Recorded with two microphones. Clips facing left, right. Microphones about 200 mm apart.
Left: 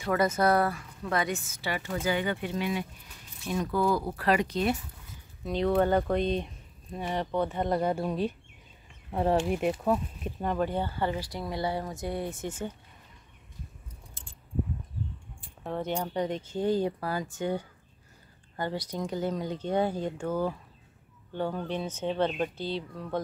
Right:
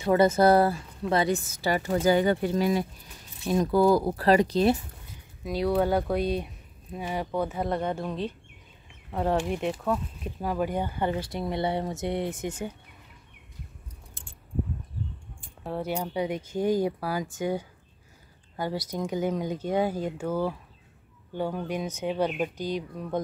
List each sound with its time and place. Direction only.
0.0 s speech: 25° right (ahead or behind)
5.4 s speech: 10° right (ahead or behind)
14.2 s keys jangling: 55° right (ahead or behind)
15.6 s speech: 5° right (ahead or behind)